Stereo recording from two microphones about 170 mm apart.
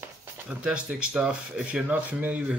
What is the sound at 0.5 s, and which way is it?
Speech, 5° right (ahead or behind).